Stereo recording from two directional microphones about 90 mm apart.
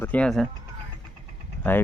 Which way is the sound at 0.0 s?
15° left (ahead or behind).